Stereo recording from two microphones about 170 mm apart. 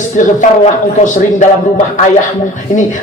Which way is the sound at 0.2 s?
45° left (ahead or behind).